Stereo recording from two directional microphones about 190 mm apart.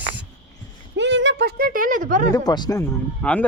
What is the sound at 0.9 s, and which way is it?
Speech, 70° right (ahead or behind).